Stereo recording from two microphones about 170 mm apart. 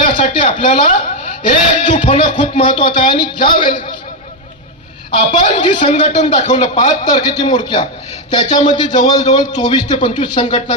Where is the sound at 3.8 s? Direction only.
30° left (ahead or behind).